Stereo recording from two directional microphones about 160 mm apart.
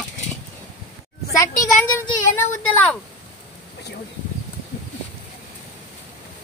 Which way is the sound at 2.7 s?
10° left (ahead or behind).